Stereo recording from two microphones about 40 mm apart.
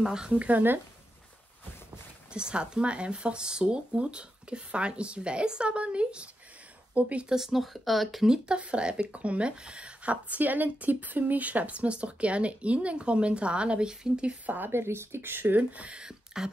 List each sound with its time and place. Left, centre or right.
0.0 s speech: centre
2.3 s speech: right
7.2 s speech: centre
8.3 s speech: right
10.4 s speech: right
14.4 s a woman's voice: right
14.7 s a woman's voice: right
15.4 s speech: right
16.0 s a sound: centre